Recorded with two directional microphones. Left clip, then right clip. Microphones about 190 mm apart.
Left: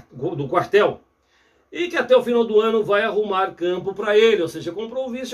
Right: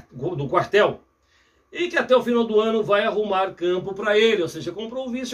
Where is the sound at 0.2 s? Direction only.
5° left (ahead or behind).